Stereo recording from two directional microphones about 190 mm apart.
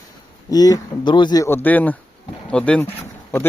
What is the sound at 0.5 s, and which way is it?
Speech, 20° left (ahead or behind).